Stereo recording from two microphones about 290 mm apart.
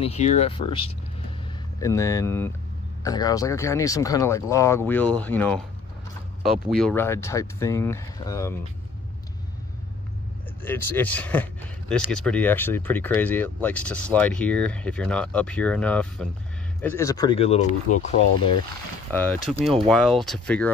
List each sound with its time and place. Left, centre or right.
0.0 s speech: left
10.6 s speech: centre; by 18.5 s left
19.1 s speech: centre